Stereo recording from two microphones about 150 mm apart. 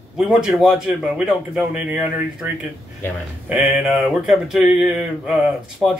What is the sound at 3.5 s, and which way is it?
A man's voice, 5° right (ahead or behind).